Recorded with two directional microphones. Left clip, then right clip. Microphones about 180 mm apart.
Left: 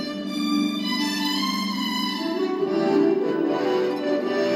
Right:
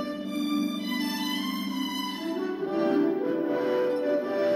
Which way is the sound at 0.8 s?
10° left (ahead or behind).